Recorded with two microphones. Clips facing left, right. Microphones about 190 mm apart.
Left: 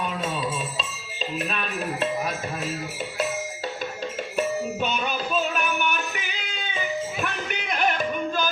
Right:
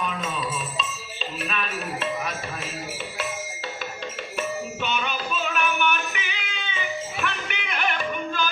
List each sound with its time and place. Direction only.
4.4 s music: 35° left (ahead or behind)